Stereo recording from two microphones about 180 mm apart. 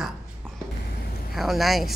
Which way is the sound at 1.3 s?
Centre (ahead or behind).